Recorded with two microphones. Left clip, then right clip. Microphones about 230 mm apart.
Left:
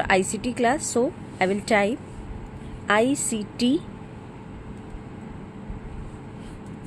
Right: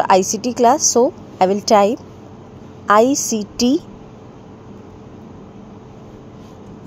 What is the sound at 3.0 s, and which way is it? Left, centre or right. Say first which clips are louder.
Speech: right 8 dB; centre.